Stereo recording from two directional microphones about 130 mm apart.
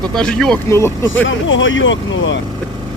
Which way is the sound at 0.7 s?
20° left (ahead or behind).